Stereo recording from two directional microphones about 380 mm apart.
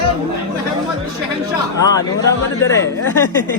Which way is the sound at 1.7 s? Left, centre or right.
Centre.